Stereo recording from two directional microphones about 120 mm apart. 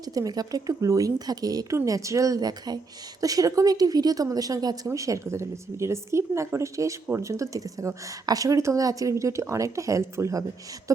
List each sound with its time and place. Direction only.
0.0 s a woman's voice: 30° right (ahead or behind)